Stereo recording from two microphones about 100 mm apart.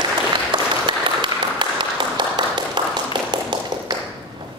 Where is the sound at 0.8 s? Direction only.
55° right (ahead or behind).